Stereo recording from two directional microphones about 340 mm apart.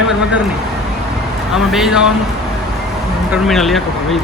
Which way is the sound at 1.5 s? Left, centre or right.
Centre.